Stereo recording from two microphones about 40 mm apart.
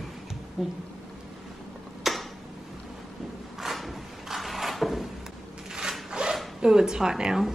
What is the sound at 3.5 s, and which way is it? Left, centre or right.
Drawer open or close, centre.